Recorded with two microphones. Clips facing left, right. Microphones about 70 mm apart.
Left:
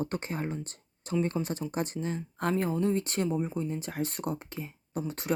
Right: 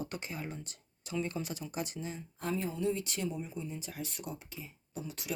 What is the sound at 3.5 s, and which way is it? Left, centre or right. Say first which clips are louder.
Speech: left 8 dB; left.